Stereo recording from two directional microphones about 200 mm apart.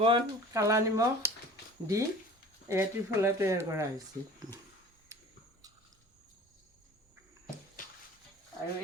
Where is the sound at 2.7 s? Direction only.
10° right (ahead or behind).